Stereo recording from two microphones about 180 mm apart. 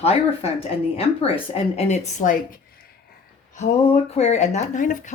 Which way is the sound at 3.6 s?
40° left (ahead or behind).